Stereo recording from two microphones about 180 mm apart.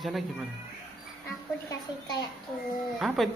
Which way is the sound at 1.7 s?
20° left (ahead or behind).